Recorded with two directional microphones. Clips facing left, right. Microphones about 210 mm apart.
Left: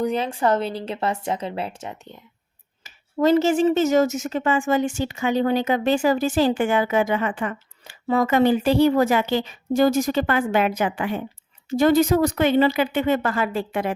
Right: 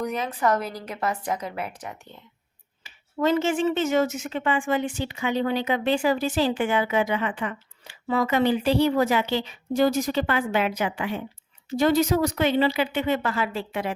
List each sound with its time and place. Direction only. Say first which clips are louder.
0.0 s a woman's voice: left 4 dB; 30° left (ahead or behind)
2.8 s speech: left 4 dB; 40° left (ahead or behind)